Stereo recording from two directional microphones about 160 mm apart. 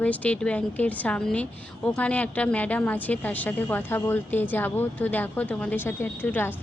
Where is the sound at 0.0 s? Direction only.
10° left (ahead or behind).